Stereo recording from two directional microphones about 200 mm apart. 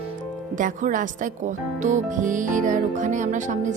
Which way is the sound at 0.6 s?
40° right (ahead or behind).